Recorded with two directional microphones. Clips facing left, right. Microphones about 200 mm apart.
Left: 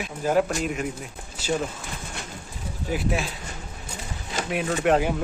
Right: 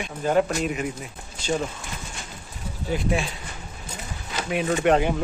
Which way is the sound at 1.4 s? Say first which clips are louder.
Even; 5° left (ahead or behind).